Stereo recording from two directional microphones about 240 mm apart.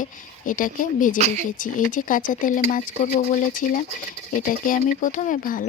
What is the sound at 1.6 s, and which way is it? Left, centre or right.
Speech, left.